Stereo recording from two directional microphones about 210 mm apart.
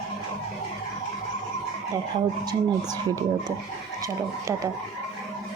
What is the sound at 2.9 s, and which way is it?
Speech, 20° right (ahead or behind).